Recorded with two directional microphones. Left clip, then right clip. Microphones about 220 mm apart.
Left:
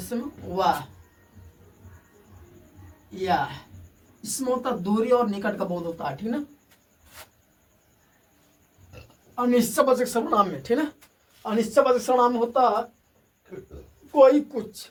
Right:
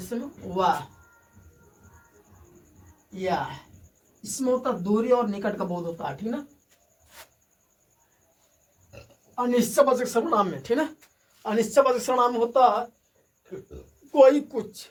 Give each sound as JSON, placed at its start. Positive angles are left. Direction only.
{"t": 0.1, "sound": "speech", "side_deg": -10}
{"t": 4.4, "sound": "speech", "side_deg": -10}
{"t": 9.3, "sound": "speech", "side_deg": -20}
{"t": 14.1, "sound": "speech", "side_deg": -30}